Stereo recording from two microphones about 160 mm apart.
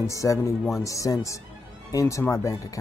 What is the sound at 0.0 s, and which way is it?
Speech, 20° left (ahead or behind).